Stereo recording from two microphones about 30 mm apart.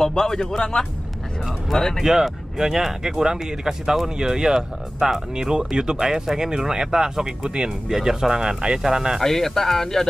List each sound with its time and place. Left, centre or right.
0.0 s a man's voice: centre
1.7 s speech: centre
2.2 s speech: centre; by 7.7 s right
7.9 s speech: centre
9.2 s speech: centre